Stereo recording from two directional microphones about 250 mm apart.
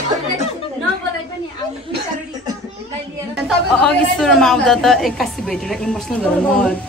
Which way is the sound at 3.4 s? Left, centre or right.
Centre.